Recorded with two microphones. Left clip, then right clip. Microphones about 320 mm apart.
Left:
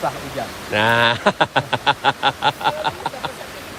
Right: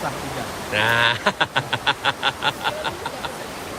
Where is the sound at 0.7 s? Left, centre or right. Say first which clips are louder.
Left 3 dB; centre.